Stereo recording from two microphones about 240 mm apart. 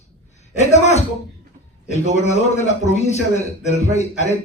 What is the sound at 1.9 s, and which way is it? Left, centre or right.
A man's voice, left.